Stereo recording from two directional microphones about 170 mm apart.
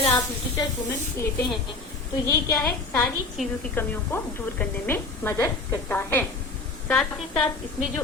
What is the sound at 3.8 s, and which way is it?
A woman's voice, 10° left (ahead or behind).